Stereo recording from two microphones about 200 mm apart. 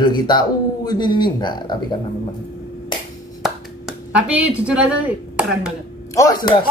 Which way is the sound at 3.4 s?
5° right (ahead or behind).